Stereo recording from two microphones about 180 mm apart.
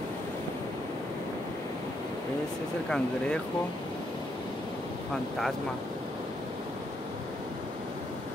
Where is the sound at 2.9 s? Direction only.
5° left (ahead or behind).